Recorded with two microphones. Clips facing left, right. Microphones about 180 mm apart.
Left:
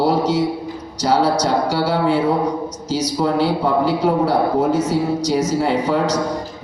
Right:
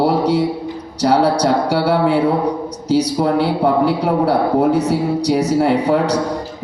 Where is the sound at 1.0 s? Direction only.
60° right (ahead or behind).